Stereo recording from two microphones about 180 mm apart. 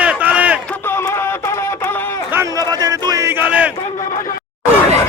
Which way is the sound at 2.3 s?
20° right (ahead or behind).